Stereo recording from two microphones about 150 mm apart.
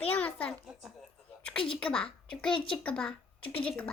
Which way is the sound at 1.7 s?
5° left (ahead or behind).